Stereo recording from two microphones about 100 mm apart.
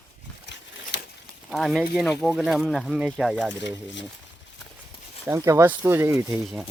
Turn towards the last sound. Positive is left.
turn(degrees=-25)  # may be behind; listen again after turning